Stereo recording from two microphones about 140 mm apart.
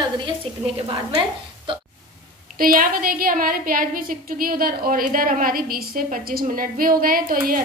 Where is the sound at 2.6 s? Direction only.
90° right.